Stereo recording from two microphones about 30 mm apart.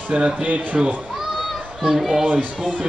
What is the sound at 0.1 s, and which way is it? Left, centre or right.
Speech, right.